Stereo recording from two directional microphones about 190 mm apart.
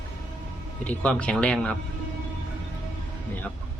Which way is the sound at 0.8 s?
5° left (ahead or behind).